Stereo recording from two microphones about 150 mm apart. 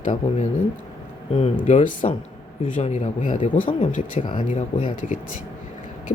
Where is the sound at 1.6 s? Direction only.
55° left (ahead or behind).